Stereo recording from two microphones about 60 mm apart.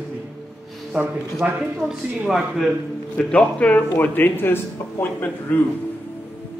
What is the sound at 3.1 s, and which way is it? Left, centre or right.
A man's voice, left.